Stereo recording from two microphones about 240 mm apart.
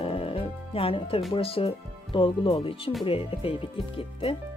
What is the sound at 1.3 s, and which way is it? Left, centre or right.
Speech, left.